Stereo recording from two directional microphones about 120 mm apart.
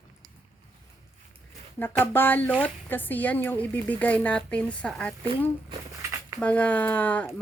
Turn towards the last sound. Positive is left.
turn(degrees=15)  # may be behind; listen again after turning